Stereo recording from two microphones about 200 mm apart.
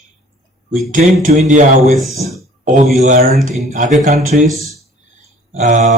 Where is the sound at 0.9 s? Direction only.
40° right (ahead or behind).